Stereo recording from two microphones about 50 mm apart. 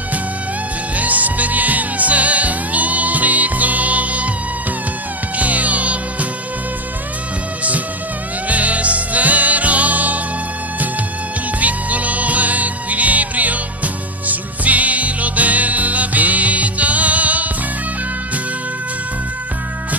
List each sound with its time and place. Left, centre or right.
0.9 s music: right
5.4 s music: right
8.5 s music: right
11.6 s music: right